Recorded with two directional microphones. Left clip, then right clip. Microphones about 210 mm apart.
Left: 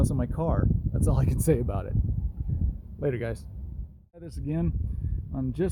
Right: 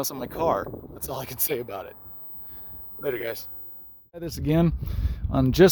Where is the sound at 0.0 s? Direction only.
20° right (ahead or behind); by 1.9 s 5° right (ahead or behind).